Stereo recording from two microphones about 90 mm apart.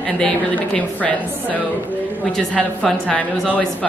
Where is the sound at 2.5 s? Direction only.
5° left (ahead or behind).